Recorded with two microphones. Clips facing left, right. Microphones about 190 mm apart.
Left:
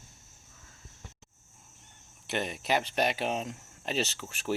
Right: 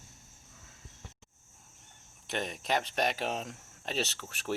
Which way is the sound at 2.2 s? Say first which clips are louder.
Left 3 dB; 5° left (ahead or behind).